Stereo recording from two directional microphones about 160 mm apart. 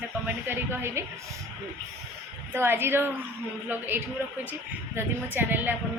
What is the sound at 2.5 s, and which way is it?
A woman's voice, 15° right (ahead or behind).